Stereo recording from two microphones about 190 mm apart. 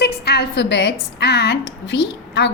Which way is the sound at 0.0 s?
60° left (ahead or behind).